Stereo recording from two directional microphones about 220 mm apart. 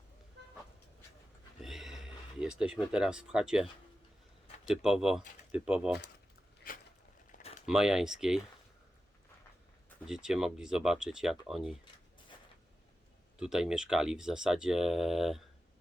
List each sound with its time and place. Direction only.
1.6 s a sound: centre (ahead or behind)
2.4 s speech: 5° right (ahead or behind)
4.7 s speech: centre (ahead or behind)
6.7 s a sound: 40° left (ahead or behind)
7.7 s speech: centre (ahead or behind)
10.1 s speech: 5° right (ahead or behind)
13.4 s speech: centre (ahead or behind)